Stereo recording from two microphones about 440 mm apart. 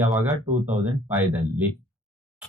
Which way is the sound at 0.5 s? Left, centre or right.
Centre.